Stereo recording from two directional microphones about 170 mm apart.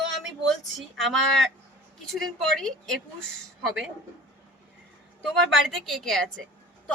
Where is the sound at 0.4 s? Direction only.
Centre (ahead or behind).